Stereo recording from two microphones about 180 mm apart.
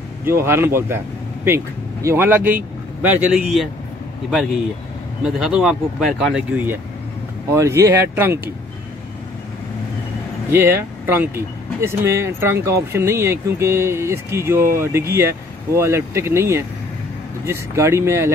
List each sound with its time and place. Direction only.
0.2 s speech: 15° right (ahead or behind)
5.2 s speech: 5° right (ahead or behind)
10.5 s speech: 10° right (ahead or behind)